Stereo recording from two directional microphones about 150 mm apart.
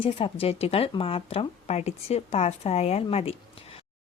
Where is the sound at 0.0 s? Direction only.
40° left (ahead or behind).